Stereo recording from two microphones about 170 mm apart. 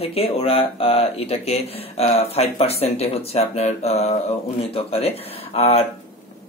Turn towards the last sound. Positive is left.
turn(degrees=35)  # may be behind; listen again after turning